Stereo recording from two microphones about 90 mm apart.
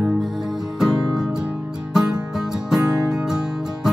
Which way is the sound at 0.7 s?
5° right (ahead or behind).